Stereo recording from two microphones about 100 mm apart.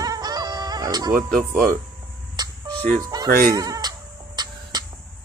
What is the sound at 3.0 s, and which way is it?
Goat, 35° right (ahead or behind).